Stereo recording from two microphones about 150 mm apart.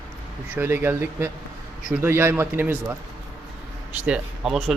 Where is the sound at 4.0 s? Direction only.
5° right (ahead or behind).